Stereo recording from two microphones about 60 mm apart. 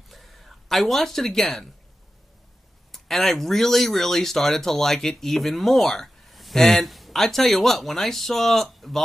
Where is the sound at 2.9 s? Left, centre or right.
Centre.